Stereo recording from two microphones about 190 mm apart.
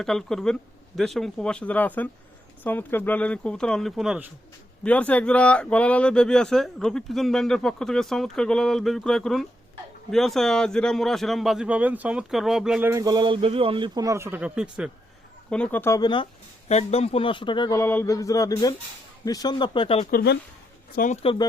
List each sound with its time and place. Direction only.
0.0 s speech: centre (ahead or behind)
4.8 s speech: 5° left (ahead or behind)
12.9 s a man's voice: 20° right (ahead or behind)
15.4 s speech: 5° left (ahead or behind); by 20.1 s 30° left (ahead or behind)
20.1 s speech: 55° left (ahead or behind)
20.9 s speech: 40° left (ahead or behind)